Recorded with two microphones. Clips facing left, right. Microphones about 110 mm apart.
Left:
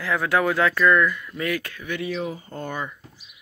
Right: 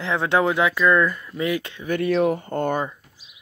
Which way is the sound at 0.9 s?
35° right (ahead or behind).